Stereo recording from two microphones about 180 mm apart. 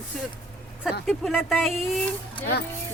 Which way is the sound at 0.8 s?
Centre (ahead or behind).